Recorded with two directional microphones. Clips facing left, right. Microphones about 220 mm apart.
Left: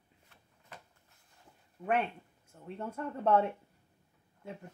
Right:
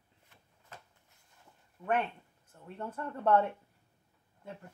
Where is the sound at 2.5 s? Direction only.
10° left (ahead or behind).